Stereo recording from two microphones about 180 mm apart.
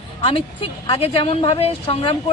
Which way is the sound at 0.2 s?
30° left (ahead or behind).